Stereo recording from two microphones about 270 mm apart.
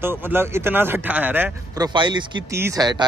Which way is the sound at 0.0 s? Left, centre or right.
Centre.